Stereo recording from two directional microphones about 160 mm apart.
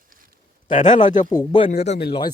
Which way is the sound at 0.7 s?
50° left (ahead or behind).